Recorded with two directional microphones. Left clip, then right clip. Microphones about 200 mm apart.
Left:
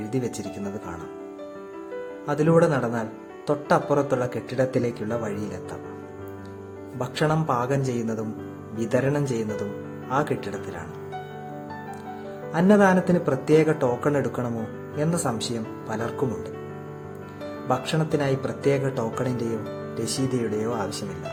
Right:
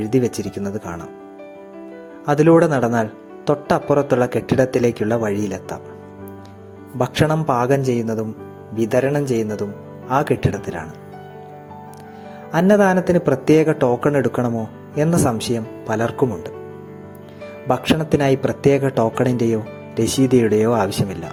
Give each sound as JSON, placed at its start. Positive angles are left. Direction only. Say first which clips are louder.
{"t": 0.1, "sound": "speech", "louder": "right 10 dB", "side_deg": -30}
{"t": 2.2, "sound": "speech", "louder": "right 7 dB", "side_deg": -35}
{"t": 7.0, "sound": "a man's voice", "louder": "right 6 dB", "side_deg": -30}
{"t": 12.5, "sound": "speech", "louder": "right 4 dB", "side_deg": -30}
{"t": 17.7, "sound": "speech", "louder": "right 7 dB", "side_deg": -30}